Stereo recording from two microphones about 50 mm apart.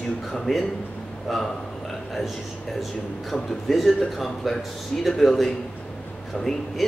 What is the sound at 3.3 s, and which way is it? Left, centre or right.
A man's voice, centre.